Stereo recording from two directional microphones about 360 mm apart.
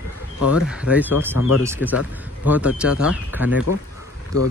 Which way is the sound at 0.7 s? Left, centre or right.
Centre.